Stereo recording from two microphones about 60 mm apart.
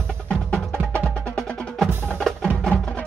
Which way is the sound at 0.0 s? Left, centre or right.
Centre.